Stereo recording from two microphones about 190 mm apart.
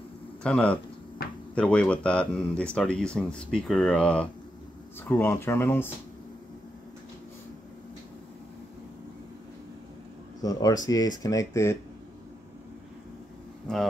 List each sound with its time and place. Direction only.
0.4 s speech: 5° left (ahead or behind)
10.4 s speech: 20° left (ahead or behind)
13.7 s speech: 5° left (ahead or behind)